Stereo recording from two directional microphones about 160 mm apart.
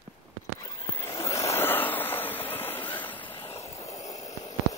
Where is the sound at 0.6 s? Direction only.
20° left (ahead or behind).